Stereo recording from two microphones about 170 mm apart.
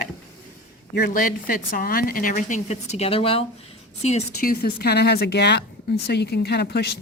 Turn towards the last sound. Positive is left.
turn(degrees=75)  # may be behind; listen again after turning